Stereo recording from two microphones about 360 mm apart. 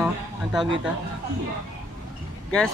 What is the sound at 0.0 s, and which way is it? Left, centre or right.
Speech, centre.